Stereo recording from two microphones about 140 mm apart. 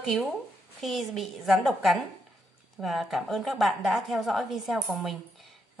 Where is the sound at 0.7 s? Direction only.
Centre (ahead or behind).